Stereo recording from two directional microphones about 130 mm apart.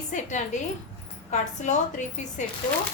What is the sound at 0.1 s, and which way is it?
A woman's voice, 70° left (ahead or behind).